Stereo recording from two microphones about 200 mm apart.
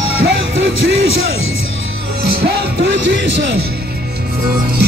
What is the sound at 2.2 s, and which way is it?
Speech, 55° right (ahead or behind).